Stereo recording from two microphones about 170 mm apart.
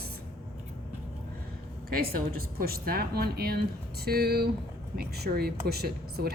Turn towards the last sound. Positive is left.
turn(degrees=-70)  # may be behind; listen again after turning